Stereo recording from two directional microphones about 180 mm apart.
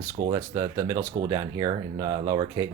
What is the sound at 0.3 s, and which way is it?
Speech, 15° right (ahead or behind).